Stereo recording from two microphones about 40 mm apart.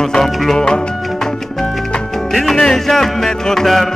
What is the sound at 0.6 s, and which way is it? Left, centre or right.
Music, centre.